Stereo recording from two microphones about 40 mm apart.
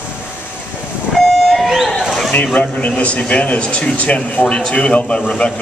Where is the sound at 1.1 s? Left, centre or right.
Centre.